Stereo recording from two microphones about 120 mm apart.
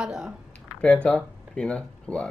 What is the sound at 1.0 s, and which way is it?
Speech, 5° left (ahead or behind).